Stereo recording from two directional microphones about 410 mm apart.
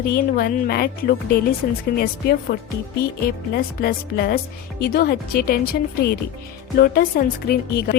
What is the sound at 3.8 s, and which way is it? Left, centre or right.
A woman's voice, left.